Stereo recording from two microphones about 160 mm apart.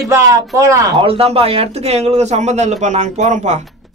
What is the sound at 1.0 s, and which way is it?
Speech, 35° right (ahead or behind).